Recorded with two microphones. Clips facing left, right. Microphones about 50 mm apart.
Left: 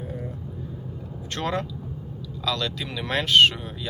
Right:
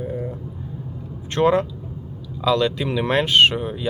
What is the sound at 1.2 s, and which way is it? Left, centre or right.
Speech, right.